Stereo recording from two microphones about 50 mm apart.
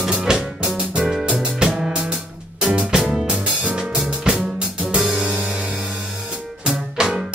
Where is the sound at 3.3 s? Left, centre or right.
Right.